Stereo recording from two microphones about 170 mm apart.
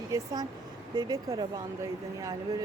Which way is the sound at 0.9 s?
20° right (ahead or behind).